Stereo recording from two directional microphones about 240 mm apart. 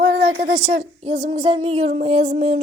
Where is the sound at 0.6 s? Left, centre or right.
Right.